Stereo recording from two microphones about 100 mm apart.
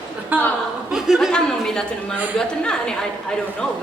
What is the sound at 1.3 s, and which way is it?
A man's voice, 10° left (ahead or behind).